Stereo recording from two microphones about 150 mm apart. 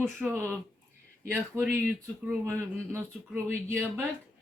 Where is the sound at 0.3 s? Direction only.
15° right (ahead or behind).